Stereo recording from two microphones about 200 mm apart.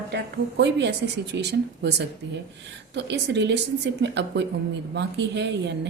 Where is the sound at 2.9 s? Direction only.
60° right (ahead or behind).